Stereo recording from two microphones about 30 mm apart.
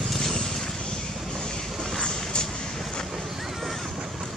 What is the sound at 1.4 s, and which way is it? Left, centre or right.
Vehicle, left.